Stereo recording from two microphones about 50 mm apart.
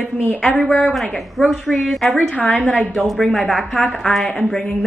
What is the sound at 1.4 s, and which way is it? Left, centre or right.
Speech, centre.